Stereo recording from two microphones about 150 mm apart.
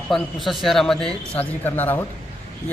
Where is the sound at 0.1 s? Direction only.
Centre (ahead or behind).